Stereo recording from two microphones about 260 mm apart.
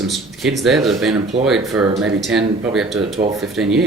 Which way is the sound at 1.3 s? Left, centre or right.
Right.